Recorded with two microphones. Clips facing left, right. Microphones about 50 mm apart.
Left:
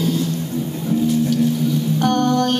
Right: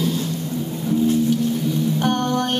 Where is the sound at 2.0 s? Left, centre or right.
Centre.